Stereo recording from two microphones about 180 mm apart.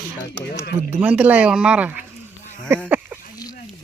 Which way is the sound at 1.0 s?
10° right (ahead or behind).